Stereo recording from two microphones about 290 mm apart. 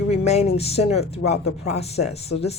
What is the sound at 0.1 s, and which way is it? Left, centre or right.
Speech, left.